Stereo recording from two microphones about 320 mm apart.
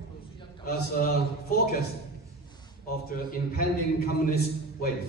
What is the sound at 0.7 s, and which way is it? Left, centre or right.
Speech, left.